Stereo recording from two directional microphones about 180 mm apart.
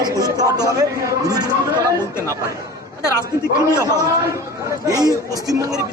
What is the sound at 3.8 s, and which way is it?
Speech, 20° right (ahead or behind).